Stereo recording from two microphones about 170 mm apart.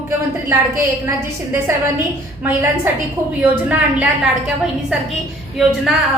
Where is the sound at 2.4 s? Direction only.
15° right (ahead or behind).